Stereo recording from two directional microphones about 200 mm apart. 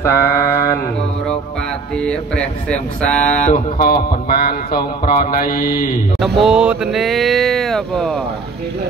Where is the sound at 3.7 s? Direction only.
45° left (ahead or behind).